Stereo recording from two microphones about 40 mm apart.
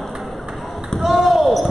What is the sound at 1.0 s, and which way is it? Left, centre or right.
Basketball bounce, centre.